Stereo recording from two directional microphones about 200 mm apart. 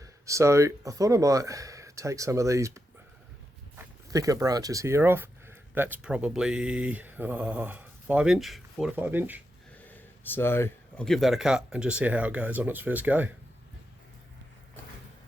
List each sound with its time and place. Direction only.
0.0 s speech: 15° right (ahead or behind)
4.1 s speech: 15° right (ahead or behind)
9.7 s speech: 10° left (ahead or behind); by 13.3 s 10° right (ahead or behind)